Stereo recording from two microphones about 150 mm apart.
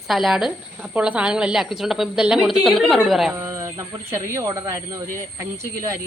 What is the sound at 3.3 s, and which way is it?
Speech, 20° right (ahead or behind).